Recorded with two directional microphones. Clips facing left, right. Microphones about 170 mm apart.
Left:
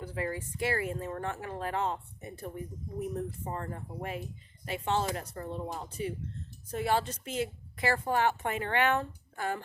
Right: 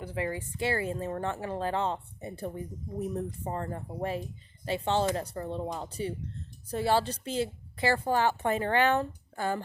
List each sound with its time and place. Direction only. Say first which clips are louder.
0.0 s speech: right 2 dB; 25° right (ahead or behind)
3.5 s a woman's voice: right 3 dB; 30° right (ahead or behind)